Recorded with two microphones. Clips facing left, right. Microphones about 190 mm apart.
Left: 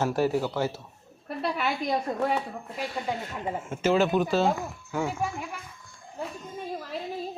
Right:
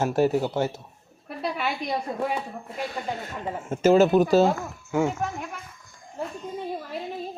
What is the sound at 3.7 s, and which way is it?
Speech, 40° right (ahead or behind).